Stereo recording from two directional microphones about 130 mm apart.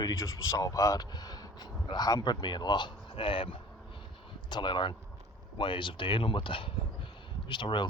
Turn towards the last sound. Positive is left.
turn(degrees=35)  # may be behind; listen again after turning